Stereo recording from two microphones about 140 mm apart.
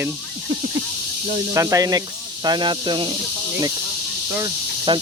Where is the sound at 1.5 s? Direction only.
25° right (ahead or behind).